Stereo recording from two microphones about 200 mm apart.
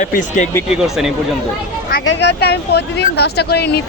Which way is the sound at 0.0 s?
40° left (ahead or behind).